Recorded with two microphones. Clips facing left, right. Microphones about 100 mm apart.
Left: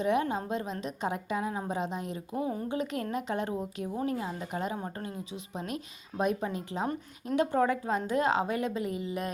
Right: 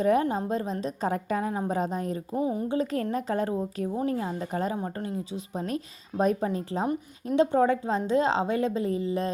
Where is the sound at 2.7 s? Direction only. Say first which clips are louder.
Right 5 dB; 35° right (ahead or behind).